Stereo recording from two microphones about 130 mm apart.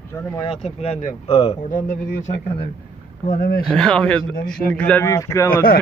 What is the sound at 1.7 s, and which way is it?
Speech, 90° left.